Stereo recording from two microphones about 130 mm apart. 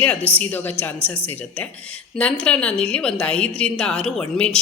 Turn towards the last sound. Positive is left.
turn(degrees=5)  # may be behind; listen again after turning